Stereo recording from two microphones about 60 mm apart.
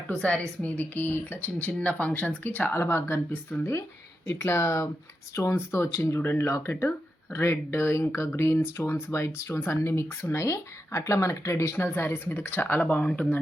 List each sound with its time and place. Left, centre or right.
0.2 s a woman's voice: centre
0.6 s speech: left
1.5 s speech: left
3.6 s speech: left
5.5 s speech: left